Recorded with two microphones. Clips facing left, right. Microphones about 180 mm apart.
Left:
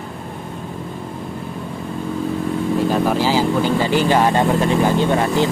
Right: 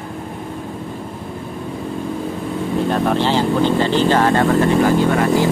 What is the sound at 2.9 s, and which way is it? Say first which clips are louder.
Speech: right 2 dB; 5° left (ahead or behind).